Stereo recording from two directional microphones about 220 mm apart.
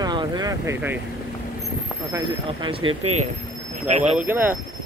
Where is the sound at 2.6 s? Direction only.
25° right (ahead or behind).